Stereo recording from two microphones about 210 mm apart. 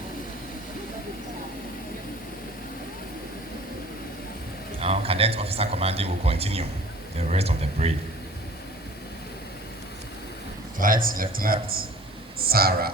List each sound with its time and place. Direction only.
4.8 s speech: 30° right (ahead or behind)
10.8 s speech: 40° right (ahead or behind)